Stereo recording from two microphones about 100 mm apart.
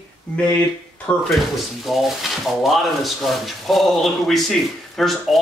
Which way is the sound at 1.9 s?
Centre (ahead or behind).